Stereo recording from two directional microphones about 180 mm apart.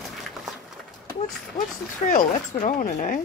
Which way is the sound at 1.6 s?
40° left (ahead or behind).